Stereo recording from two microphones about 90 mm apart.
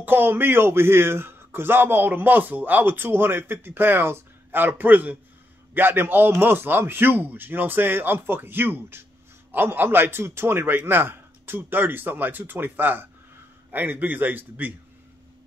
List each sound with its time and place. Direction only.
0.0 s speech: 20° right (ahead or behind)